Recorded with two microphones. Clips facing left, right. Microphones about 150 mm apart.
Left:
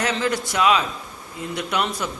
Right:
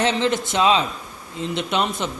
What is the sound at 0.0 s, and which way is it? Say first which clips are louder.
A man's voice: right 3 dB; 25° right (ahead or behind).